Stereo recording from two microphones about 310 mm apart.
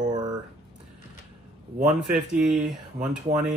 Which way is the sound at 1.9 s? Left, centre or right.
Centre.